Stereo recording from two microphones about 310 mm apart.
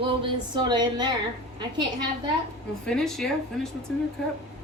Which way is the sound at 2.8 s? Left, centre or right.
Centre.